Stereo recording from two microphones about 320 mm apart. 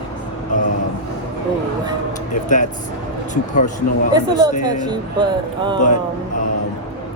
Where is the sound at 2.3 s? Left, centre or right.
Left.